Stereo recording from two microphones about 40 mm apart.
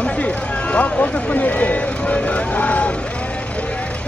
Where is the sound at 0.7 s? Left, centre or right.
Left.